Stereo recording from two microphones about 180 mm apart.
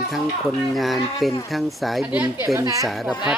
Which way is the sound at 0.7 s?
Centre (ahead or behind).